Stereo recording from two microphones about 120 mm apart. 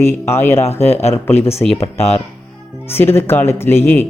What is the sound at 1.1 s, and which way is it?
Speech, 55° left (ahead or behind).